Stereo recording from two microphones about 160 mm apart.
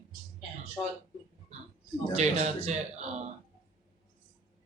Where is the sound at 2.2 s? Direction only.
40° right (ahead or behind).